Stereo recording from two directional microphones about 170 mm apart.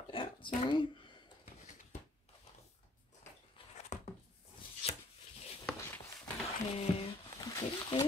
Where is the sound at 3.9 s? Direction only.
45° left (ahead or behind).